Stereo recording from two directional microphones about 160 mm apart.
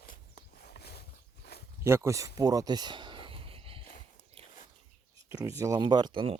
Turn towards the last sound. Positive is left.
turn(degrees=-35)  # may be behind; listen again after turning